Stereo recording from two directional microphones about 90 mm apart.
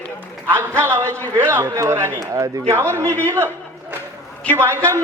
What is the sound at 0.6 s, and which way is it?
A man's voice, 25° right (ahead or behind).